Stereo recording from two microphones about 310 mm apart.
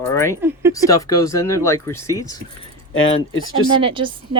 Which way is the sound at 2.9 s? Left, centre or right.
Left.